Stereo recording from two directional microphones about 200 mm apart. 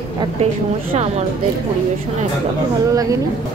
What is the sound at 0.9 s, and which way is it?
Speech, 35° right (ahead or behind).